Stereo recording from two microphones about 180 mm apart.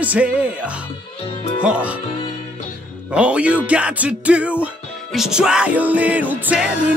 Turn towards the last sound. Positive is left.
turn(degrees=-5)  # may be behind; listen again after turning